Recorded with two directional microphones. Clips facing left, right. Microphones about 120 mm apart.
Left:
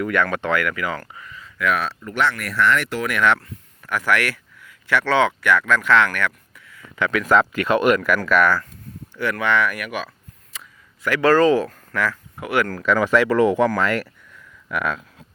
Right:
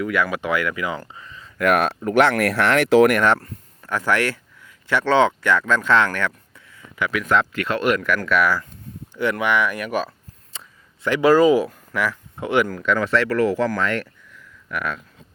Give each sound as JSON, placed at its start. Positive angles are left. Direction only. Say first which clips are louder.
{"t": 0.0, "sound": "speech", "louder": "left 1 dB", "side_deg": -5}
{"t": 1.5, "sound": "speech", "louder": "right 4 dB", "side_deg": -55}
{"t": 2.0, "sound": "speech", "louder": "right 7 dB", "side_deg": -75}
{"t": 3.1, "sound": "speech", "louder": "right 1 dB", "side_deg": -40}
{"t": 6.9, "sound": "speech", "louder": "left 3 dB", "side_deg": -5}
{"t": 9.1, "sound": "a sound", "louder": "even", "side_deg": -20}
{"t": 11.2, "sound": "speech", "louder": "right 1 dB", "side_deg": -10}
{"t": 12.6, "sound": "speech", "louder": "left 2 dB", "side_deg": 0}
{"t": 13.8, "sound": "speech", "louder": "left 2 dB", "side_deg": 5}